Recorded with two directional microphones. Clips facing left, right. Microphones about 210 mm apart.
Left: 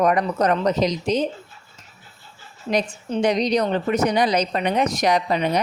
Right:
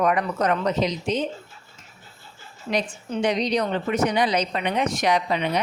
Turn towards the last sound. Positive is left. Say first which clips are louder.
# left 2 dB
turn(degrees=40)  # may be behind; listen again after turning